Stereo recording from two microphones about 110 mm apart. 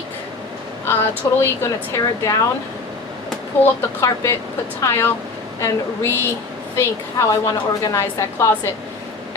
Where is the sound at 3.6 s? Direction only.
25° left (ahead or behind).